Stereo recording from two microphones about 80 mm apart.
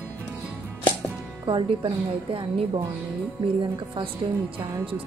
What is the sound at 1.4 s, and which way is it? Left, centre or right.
Speech, right.